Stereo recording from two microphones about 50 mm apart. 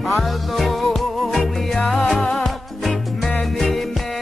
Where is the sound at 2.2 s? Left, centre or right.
Centre.